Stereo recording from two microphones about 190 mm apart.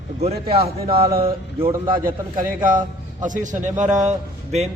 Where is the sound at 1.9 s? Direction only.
45° right (ahead or behind).